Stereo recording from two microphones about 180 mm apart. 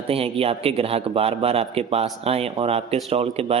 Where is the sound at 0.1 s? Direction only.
30° right (ahead or behind).